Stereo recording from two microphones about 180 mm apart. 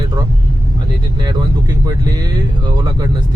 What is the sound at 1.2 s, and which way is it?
Speech, 20° right (ahead or behind).